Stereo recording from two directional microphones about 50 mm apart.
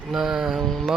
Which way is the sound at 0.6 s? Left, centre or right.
Centre.